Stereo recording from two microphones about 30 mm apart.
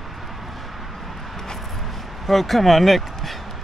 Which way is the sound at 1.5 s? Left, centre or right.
Centre.